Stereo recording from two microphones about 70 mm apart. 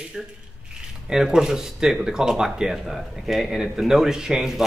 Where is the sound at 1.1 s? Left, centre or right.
Centre.